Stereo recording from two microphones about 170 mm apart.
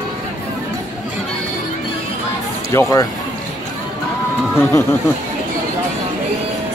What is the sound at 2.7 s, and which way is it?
Speech, 20° left (ahead or behind).